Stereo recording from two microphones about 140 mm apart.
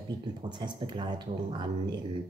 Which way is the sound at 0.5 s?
35° right (ahead or behind).